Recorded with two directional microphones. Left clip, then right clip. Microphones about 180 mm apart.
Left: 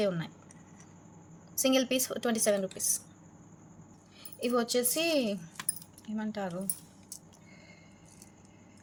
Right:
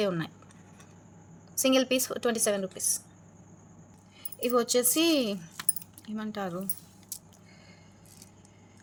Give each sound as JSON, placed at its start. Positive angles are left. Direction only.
{"t": 0.0, "sound": "a woman's voice", "side_deg": -25}
{"t": 1.5, "sound": "a woman's voice", "side_deg": -25}
{"t": 4.4, "sound": "a woman's voice", "side_deg": -20}